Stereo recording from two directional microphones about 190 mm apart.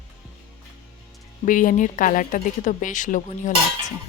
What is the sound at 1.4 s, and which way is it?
A woman's voice, 45° left (ahead or behind).